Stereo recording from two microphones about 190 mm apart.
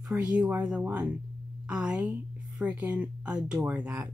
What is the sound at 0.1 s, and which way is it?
Speech, 5° right (ahead or behind).